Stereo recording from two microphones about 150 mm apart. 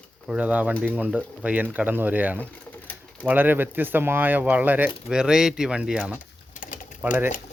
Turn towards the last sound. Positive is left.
turn(degrees=60)  # may be behind; listen again after turning